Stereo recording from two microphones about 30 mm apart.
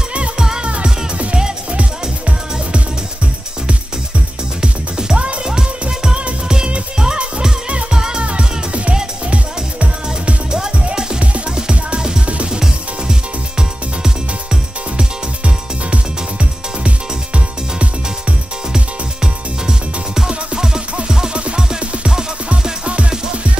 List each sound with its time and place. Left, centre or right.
0.4 s music: right
4.6 s music: right
5.1 s music: right
5.4 s music: right
7.9 s music: right
8.2 s music: right
15.0 s music: right
20.2 s music: right
22.8 s music: right